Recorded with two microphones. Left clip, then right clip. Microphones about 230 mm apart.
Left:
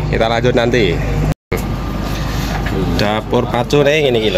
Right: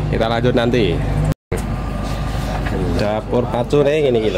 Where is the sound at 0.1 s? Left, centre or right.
Centre.